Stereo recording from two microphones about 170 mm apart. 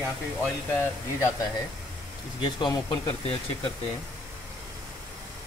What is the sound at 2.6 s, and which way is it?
Speech, 25° left (ahead or behind).